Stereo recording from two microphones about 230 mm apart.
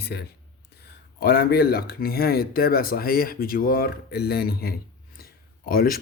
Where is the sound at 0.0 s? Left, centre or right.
Left.